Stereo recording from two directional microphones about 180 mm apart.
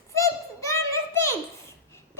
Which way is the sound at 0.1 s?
15° left (ahead or behind).